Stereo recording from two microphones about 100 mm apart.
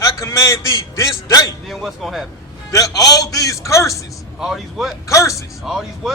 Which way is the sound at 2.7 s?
35° left (ahead or behind).